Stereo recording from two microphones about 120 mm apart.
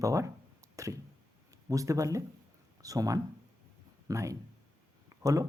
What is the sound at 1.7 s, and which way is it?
Speech, 30° right (ahead or behind).